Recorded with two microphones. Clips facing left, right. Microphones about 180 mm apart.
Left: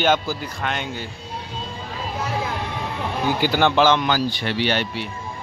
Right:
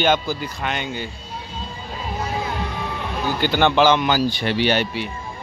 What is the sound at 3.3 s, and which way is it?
A man's voice, 5° left (ahead or behind).